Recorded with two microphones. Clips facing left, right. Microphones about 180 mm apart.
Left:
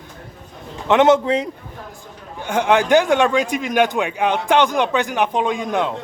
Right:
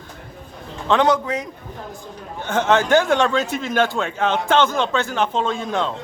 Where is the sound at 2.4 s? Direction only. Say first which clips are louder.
Left 1 dB; 10° left (ahead or behind).